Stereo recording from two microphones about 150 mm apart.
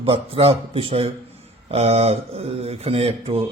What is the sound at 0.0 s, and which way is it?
A man's voice, 40° right (ahead or behind).